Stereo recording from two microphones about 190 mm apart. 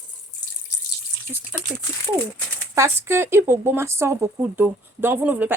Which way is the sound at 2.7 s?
15° right (ahead or behind).